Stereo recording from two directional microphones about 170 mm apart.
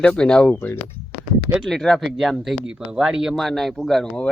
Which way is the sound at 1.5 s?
Centre (ahead or behind).